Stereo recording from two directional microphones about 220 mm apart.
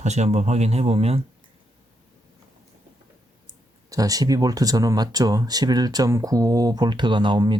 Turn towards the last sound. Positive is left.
turn(degrees=-20)  # may be behind; listen again after turning